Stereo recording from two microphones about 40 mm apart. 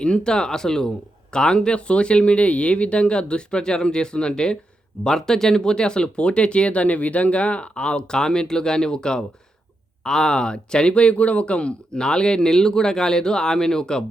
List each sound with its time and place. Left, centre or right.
0.0 s speech: left